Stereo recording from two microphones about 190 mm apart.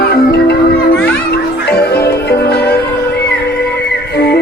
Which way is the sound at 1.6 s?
60° left (ahead or behind).